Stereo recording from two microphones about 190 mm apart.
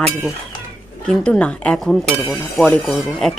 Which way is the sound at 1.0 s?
5° left (ahead or behind).